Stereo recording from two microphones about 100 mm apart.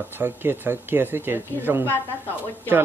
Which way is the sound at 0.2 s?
20° right (ahead or behind).